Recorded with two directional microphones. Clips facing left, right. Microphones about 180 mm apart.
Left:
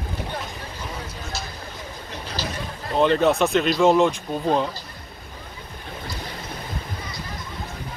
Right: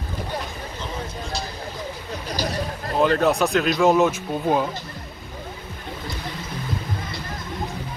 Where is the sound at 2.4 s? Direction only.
10° right (ahead or behind).